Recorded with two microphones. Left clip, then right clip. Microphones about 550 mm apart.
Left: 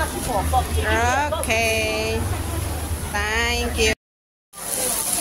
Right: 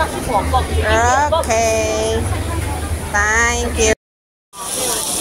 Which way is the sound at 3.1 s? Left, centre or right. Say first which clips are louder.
Right 7 dB; left.